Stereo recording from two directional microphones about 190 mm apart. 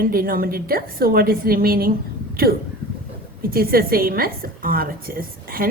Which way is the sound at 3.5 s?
50° right (ahead or behind).